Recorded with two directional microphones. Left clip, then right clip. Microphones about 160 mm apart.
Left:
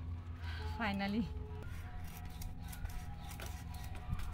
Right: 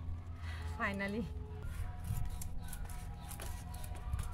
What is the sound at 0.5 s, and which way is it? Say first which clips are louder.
Music: right 1 dB; 25° right (ahead or behind).